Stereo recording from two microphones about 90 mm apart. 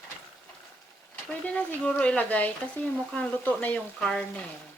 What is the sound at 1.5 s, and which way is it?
Speech, 15° left (ahead or behind).